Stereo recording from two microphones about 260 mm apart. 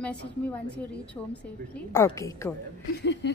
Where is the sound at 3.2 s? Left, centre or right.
Left.